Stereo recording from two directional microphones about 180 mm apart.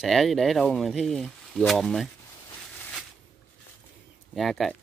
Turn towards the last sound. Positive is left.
turn(degrees=0)  # may be behind; listen again after turning